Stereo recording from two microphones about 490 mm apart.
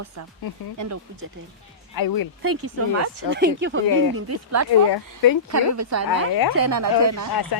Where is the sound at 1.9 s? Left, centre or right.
Left.